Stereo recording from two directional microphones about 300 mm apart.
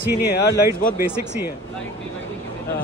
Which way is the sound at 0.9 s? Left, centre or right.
Centre.